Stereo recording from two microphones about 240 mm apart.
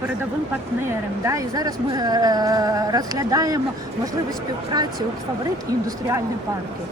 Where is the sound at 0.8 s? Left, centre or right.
Centre.